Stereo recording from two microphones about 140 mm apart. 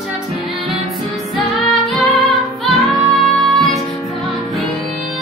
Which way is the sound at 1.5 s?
Centre (ahead or behind).